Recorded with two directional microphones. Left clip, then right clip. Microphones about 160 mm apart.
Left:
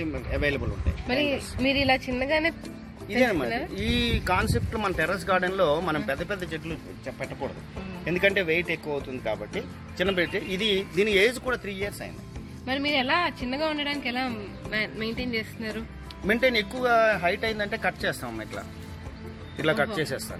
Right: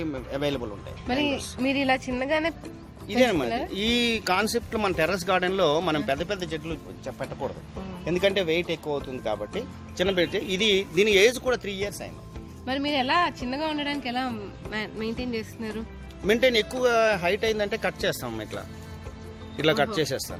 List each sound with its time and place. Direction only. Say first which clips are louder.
0.0 s speech: left 1 dB; 55° right (ahead or behind)
1.0 s a man's voice: even; 15° right (ahead or behind)
3.2 s speech: right 1 dB; 50° right (ahead or behind)
3.8 s speech: right 2 dB; 65° right (ahead or behind); by 12.0 s 45° right (ahead or behind)
12.6 s a man's voice: even; 20° right (ahead or behind)
16.2 s speech: right 2 dB; 70° right (ahead or behind)
19.6 s speech: right 2 dB; 45° right (ahead or behind)